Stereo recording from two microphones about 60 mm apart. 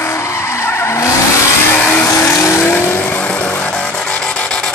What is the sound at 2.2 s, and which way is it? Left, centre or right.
Vehicle, left.